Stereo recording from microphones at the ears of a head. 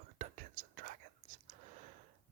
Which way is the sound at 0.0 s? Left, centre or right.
Right.